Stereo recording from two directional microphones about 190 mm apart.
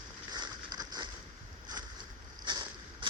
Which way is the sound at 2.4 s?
25° right (ahead or behind).